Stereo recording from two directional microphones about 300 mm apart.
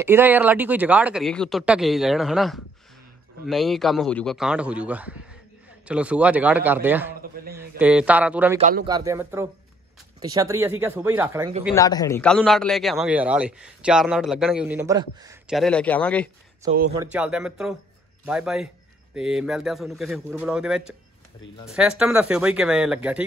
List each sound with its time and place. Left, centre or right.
0.0 s a man's voice: centre
8.5 s a man's voice: right
8.8 s speech: centre
11.7 s a man's voice: centre
15.5 s a man's voice: centre
16.6 s a man's voice: right
16.9 s a man's voice: centre